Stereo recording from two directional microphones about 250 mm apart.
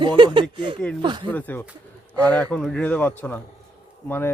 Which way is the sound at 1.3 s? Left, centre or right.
Centre.